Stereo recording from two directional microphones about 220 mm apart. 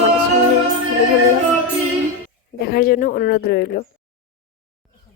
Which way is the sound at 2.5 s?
45° left (ahead or behind).